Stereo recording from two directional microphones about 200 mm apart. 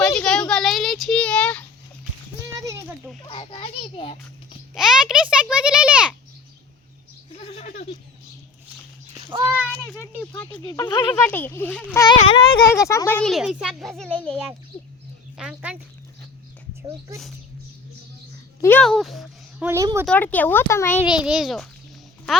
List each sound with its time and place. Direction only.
0.0 s a sound: 5° left (ahead or behind)
2.5 s a sound: 15° right (ahead or behind)
3.2 s children playing: 25° left (ahead or behind)
4.7 s a sound: centre (ahead or behind)
7.3 s goat: 30° left (ahead or behind)
9.3 s a sound: 25° right (ahead or behind)
9.6 s child singing: 10° left (ahead or behind)
10.6 s speech: 20° left (ahead or behind)
11.1 s speech: 10° left (ahead or behind)
12.0 s a child's voice: 25° left (ahead or behind); by 14.3 s 5° left (ahead or behind)
15.4 s a child's voice: 5° right (ahead or behind)
18.6 s speech: 5° left (ahead or behind); by 20.1 s 15° right (ahead or behind)
20.1 s speech: 10° left (ahead or behind)
21.0 s a child's voice: 5° right (ahead or behind)